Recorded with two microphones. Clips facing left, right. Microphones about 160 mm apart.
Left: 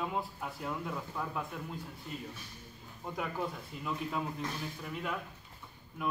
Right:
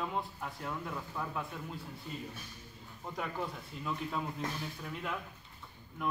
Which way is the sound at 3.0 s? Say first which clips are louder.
Left 2 dB; 5° left (ahead or behind).